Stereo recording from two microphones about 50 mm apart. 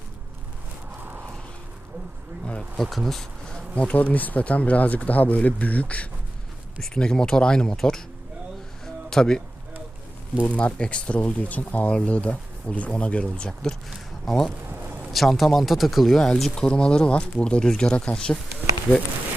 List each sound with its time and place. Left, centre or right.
0.9 s a sound: right
2.9 s speech: centre
3.5 s bee: left
3.9 s speech: left
6.8 s speech: centre
9.0 s speech: centre
10.4 s speech: left
14.3 s speech: centre